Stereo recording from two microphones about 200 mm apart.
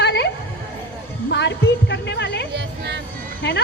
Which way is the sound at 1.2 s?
60° left (ahead or behind).